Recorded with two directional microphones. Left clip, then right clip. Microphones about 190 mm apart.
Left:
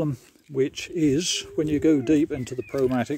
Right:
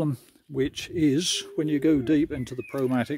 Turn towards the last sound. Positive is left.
turn(degrees=-10)  # may be behind; listen again after turning